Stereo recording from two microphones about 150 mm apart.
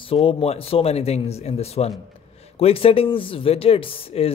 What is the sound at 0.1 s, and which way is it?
Speech, 40° left (ahead or behind).